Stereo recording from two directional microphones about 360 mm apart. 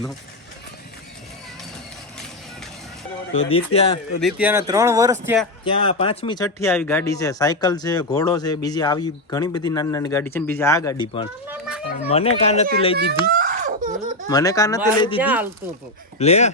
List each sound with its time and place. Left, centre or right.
3.3 s speech: centre
4.2 s speech: centre
5.6 s speech: centre
11.4 s children playing: centre
12.0 s speech: centre
13.0 s a sound: right
14.3 s speech: centre
15.2 s speech: centre
16.1 s speech: centre